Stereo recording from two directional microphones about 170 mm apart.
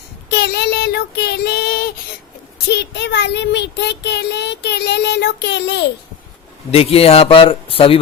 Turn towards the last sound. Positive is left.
turn(degrees=35)  # may be behind; listen again after turning